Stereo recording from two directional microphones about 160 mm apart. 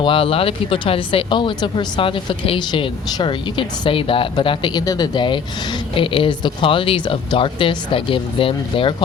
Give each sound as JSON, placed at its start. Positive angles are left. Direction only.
{"t": 0.0, "sound": "speech", "side_deg": 35}